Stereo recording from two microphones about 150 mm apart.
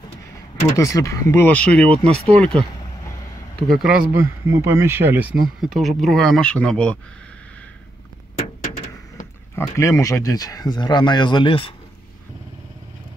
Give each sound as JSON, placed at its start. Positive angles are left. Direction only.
{"t": 0.7, "sound": "speech", "side_deg": 20}
{"t": 1.9, "sound": "speech", "side_deg": -40}
{"t": 2.3, "sound": "speech", "side_deg": 5}
{"t": 3.7, "sound": "speech", "side_deg": -5}
{"t": 4.1, "sound": "speech", "side_deg": -15}
{"t": 5.6, "sound": "speech", "side_deg": 0}
{"t": 9.6, "sound": "speech", "side_deg": 20}